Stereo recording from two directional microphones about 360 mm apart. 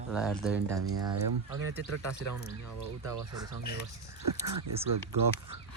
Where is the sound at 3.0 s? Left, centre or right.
Centre.